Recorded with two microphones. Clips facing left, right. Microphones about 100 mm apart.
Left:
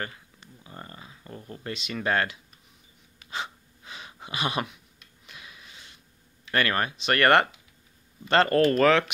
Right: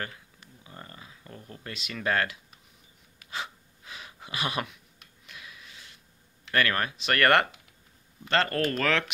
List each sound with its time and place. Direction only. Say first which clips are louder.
0.7 s a sound: left 3 dB; 5° left (ahead or behind)
1.7 s speech: left 2 dB; centre (ahead or behind)
3.3 s gasp: left 2 dB; centre (ahead or behind)
5.2 s a sound: even; 5° left (ahead or behind)
6.5 s speech: left 1 dB; 5° left (ahead or behind)
8.3 s speech: left 6 dB; 30° left (ahead or behind)